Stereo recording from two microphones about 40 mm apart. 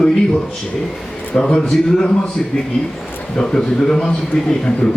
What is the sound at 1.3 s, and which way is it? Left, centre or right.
Speech, centre.